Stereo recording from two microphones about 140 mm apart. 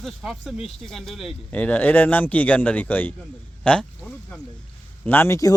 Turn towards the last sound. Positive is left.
turn(degrees=25)  # may be behind; listen again after turning